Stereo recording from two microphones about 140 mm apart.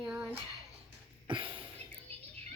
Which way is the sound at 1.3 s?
35° right (ahead or behind).